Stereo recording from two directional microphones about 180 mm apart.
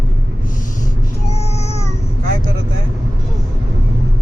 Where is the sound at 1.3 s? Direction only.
35° left (ahead or behind).